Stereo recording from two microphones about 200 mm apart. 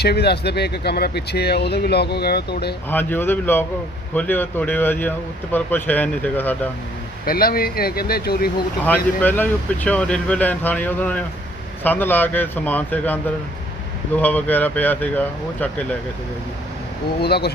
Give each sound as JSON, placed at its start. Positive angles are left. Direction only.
{"t": 0.0, "sound": "speech", "side_deg": 55}
{"t": 2.9, "sound": "speech", "side_deg": 10}
{"t": 7.3, "sound": "speech", "side_deg": 50}
{"t": 9.2, "sound": "speech", "side_deg": 10}
{"t": 14.2, "sound": "speech", "side_deg": 10}
{"t": 17.2, "sound": "speech", "side_deg": 55}